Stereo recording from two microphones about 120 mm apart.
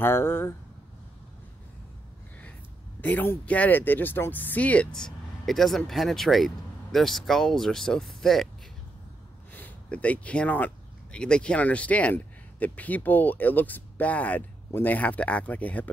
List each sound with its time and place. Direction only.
0.0 s speech: 20° left (ahead or behind)
3.0 s speech: 15° left (ahead or behind)
9.5 s speech: 15° left (ahead or behind)